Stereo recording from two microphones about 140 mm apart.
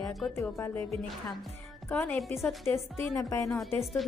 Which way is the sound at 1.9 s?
5° left (ahead or behind).